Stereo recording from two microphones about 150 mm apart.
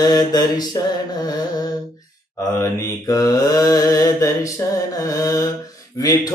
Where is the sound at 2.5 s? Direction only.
20° left (ahead or behind).